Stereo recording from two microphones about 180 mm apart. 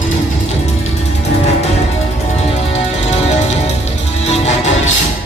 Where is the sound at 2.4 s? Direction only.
35° left (ahead or behind).